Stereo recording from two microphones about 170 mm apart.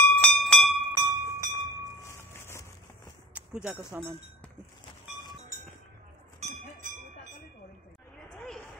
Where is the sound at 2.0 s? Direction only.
15° left (ahead or behind).